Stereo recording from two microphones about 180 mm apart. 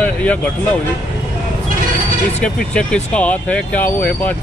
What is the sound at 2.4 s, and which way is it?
Speech, 5° left (ahead or behind).